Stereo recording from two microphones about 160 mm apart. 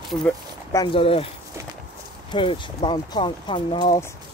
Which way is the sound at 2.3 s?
30° left (ahead or behind).